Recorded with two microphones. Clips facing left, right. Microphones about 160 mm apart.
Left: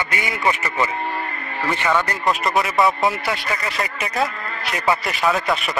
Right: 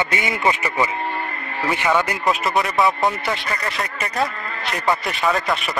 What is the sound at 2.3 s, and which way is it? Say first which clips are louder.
Speech: left 2 dB; centre (ahead or behind).